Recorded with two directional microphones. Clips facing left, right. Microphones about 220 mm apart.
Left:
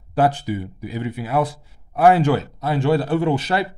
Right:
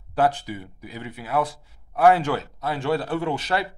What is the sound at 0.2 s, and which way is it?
Speech, 5° left (ahead or behind).